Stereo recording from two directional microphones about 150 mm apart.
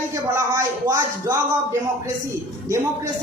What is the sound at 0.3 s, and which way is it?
A man's voice, 20° right (ahead or behind).